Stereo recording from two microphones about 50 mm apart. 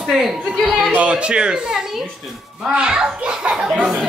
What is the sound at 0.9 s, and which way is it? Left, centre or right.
A child's voice, right.